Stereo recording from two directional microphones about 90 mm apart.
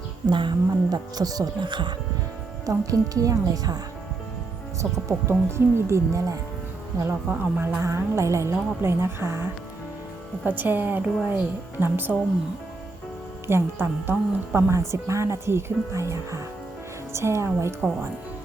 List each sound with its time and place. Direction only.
0.3 s speech: 60° right (ahead or behind)
2.6 s speech: 40° right (ahead or behind)
5.3 s a woman's voice: 30° right (ahead or behind)
13.5 s a woman's voice: 25° right (ahead or behind)